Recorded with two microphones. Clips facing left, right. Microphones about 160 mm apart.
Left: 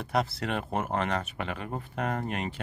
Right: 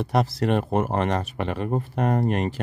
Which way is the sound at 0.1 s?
40° right (ahead or behind).